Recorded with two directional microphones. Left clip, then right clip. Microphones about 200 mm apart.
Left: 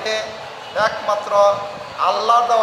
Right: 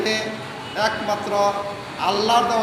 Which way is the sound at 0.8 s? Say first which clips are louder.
Left 3 dB; 15° left (ahead or behind).